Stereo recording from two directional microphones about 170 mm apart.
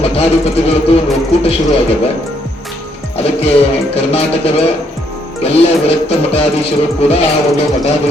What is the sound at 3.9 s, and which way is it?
Speech, 35° left (ahead or behind).